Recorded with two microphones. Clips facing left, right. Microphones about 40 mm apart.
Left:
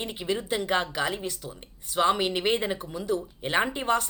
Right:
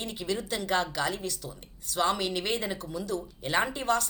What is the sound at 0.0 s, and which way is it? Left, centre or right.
Speech, left.